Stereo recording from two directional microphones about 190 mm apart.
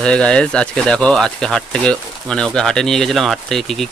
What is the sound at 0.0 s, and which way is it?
Speech, 5° left (ahead or behind).